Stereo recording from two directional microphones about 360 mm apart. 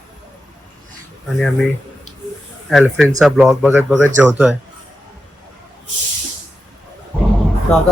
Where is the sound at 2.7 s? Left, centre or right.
Centre.